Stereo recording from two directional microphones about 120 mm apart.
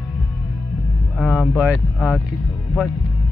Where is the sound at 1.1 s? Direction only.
10° left (ahead or behind).